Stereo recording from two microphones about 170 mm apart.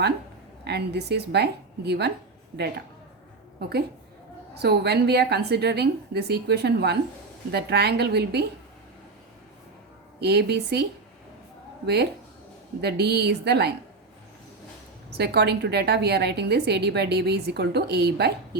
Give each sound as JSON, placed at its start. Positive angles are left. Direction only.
{"t": 0.6, "sound": "a woman's voice", "side_deg": -75}
{"t": 3.6, "sound": "a woman's voice", "side_deg": -70}
{"t": 10.2, "sound": "a woman's voice", "side_deg": -75}
{"t": 12.8, "sound": "a woman's voice", "side_deg": -75}
{"t": 15.1, "sound": "a woman's voice", "side_deg": -75}